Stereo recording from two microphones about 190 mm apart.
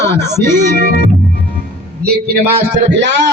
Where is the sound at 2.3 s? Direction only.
60° right (ahead or behind).